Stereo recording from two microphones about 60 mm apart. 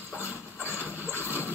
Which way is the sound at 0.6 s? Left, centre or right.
Left.